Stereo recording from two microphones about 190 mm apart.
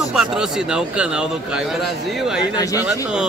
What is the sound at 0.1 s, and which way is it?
A man's voice, 5° right (ahead or behind).